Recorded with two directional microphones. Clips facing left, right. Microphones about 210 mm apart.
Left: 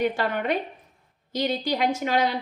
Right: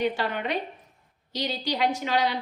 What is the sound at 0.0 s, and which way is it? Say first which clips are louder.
A woman's voice: left 2 dB; 50° left (ahead or behind).